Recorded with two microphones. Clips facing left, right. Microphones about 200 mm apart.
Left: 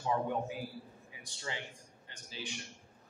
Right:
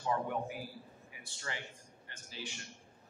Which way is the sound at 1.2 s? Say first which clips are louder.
Left 2 dB; 15° left (ahead or behind).